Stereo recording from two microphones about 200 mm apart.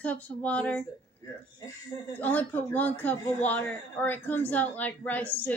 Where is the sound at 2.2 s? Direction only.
10° left (ahead or behind).